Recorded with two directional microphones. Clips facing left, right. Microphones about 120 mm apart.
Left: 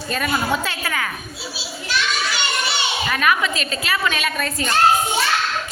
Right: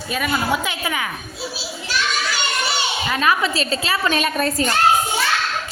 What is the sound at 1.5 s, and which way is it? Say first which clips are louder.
Children playing: left 2 dB; 40° right (ahead or behind).